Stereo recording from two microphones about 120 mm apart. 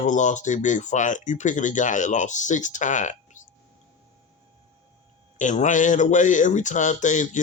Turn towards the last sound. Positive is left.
turn(degrees=90)